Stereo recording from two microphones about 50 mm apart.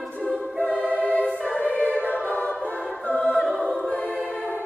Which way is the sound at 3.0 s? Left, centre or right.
Left.